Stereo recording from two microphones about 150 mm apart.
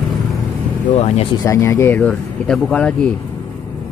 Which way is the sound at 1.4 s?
15° left (ahead or behind).